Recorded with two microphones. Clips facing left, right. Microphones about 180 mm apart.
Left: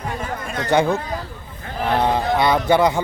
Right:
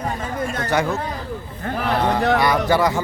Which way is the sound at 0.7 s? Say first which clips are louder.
Left 5 dB; 30° left (ahead or behind).